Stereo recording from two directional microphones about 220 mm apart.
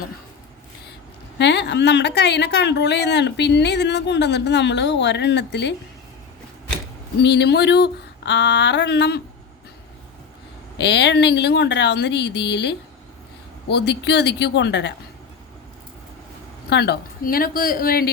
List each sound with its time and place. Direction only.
1.4 s a woman's voice: 50° left (ahead or behind)
7.2 s a woman's voice: 50° left (ahead or behind)
10.8 s a woman's voice: 50° left (ahead or behind)
16.6 s a woman's voice: 45° left (ahead or behind)